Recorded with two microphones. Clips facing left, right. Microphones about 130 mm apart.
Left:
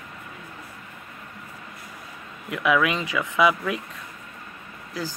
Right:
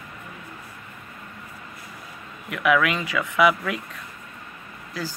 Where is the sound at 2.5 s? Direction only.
20° left (ahead or behind).